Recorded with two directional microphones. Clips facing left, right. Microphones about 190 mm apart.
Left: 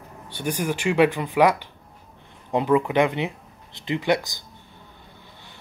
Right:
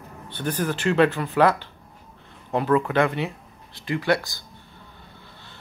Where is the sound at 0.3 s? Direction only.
10° left (ahead or behind).